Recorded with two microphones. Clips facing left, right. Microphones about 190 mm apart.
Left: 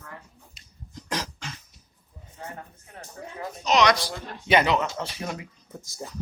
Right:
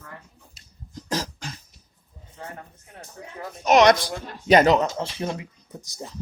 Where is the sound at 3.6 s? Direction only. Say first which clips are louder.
Right 5 dB; 50° right (ahead or behind).